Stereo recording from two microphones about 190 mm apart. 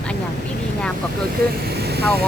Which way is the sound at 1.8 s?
60° right (ahead or behind).